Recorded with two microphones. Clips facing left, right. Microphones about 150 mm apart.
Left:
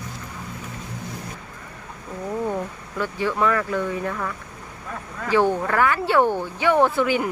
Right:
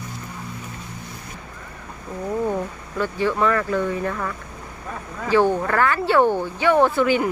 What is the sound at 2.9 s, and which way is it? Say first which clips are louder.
Speech: right 2 dB; 10° left (ahead or behind).